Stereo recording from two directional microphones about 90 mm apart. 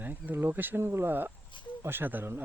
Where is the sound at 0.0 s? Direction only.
20° right (ahead or behind).